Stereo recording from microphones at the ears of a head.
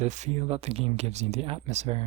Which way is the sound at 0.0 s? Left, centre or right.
Right.